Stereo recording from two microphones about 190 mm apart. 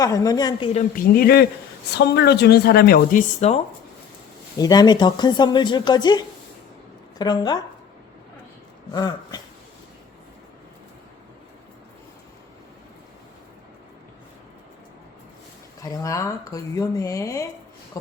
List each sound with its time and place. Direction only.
0.0 s speech: 20° left (ahead or behind)
0.7 s speech: 45° left (ahead or behind)
4.5 s speech: 20° left (ahead or behind)
8.9 s a sound: 20° left (ahead or behind)
15.8 s speech: 15° left (ahead or behind)